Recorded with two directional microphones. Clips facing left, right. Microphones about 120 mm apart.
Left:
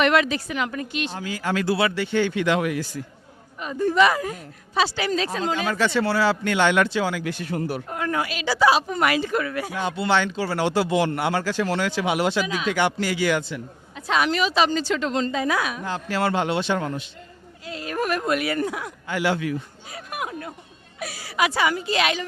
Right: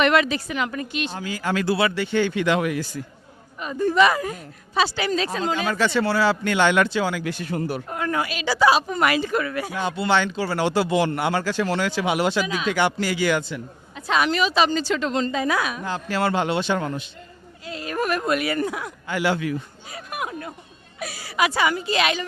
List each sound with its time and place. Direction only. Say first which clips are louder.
0.0 s speech: right 1 dB; 20° right (ahead or behind)